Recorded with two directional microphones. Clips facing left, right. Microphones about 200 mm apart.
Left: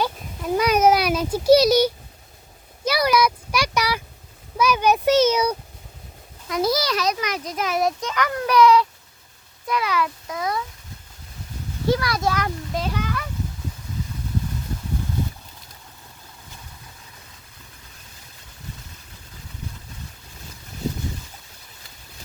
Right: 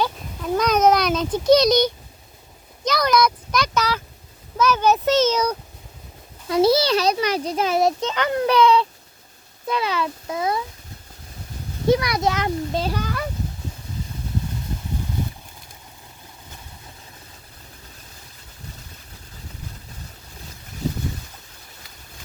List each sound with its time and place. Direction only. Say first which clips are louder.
0.0 s a sound: right 1 dB; 10° left (ahead or behind)
2.8 s a child's voice: even; 10° left (ahead or behind)
6.5 s a child's voice: right 5 dB; 30° right (ahead or behind)
11.9 s a child's voice: right 3 dB; 20° right (ahead or behind); by 13.2 s 35° right (ahead or behind)